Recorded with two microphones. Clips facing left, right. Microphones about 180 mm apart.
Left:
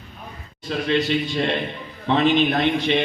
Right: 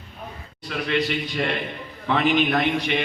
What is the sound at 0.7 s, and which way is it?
A man's voice, 30° left (ahead or behind).